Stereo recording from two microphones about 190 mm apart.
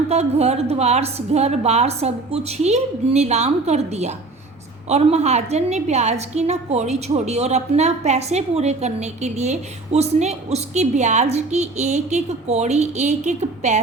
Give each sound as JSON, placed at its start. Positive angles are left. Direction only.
{"t": 0.1, "sound": "a woman's voice", "side_deg": -35}